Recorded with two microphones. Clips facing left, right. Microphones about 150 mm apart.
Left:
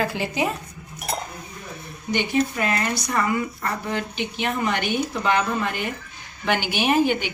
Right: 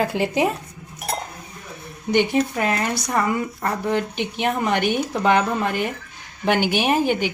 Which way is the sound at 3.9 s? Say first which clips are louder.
Right 4 dB; 55° right (ahead or behind).